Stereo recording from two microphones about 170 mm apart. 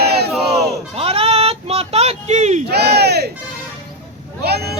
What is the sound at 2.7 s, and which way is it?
Crowd, 70° right (ahead or behind).